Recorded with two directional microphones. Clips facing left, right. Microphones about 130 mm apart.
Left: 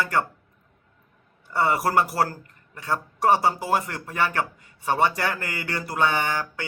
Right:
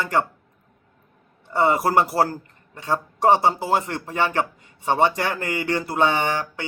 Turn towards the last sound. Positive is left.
turn(degrees=-20)  # may be behind; listen again after turning